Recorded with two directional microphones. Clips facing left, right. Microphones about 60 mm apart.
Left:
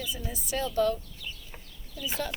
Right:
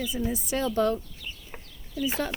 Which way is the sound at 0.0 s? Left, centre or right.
Right.